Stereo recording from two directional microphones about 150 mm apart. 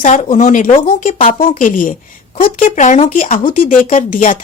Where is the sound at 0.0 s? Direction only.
50° left (ahead or behind).